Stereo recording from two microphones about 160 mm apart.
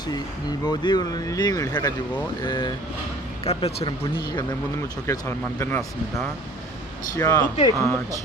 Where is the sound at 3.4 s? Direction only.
40° left (ahead or behind).